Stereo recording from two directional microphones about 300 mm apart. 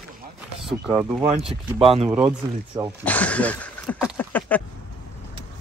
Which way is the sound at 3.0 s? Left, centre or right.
Centre.